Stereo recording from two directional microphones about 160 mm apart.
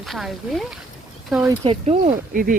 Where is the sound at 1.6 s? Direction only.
40° right (ahead or behind).